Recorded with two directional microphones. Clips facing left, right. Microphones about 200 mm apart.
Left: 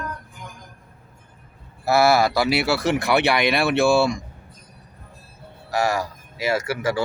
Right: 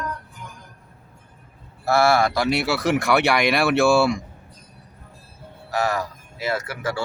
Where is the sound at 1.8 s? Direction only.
5° left (ahead or behind).